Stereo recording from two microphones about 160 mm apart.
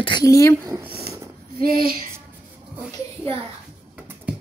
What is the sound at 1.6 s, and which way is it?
Speech, 65° right (ahead or behind).